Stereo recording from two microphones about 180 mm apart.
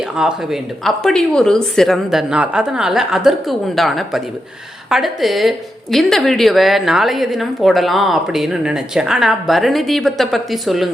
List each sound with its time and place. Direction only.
0.2 s a woman's voice: 5° right (ahead or behind)